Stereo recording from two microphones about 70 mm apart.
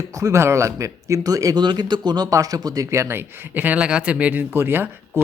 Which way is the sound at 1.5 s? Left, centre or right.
Right.